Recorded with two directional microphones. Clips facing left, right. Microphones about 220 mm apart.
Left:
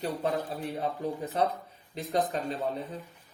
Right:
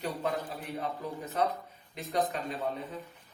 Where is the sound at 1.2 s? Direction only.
30° left (ahead or behind).